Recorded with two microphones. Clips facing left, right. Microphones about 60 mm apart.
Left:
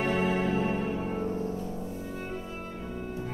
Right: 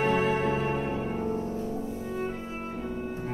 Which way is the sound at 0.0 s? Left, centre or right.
Right.